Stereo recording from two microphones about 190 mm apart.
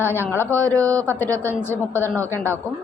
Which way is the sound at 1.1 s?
10° left (ahead or behind).